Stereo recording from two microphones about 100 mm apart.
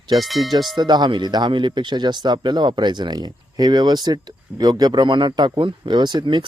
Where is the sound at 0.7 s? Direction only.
45° right (ahead or behind).